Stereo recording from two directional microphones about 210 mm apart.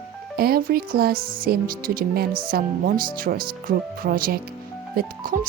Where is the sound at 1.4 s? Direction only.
45° right (ahead or behind).